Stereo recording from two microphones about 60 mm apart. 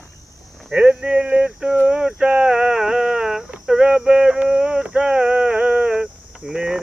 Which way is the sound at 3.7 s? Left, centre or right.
Centre.